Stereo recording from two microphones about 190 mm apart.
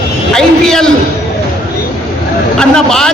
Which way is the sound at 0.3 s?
5° left (ahead or behind).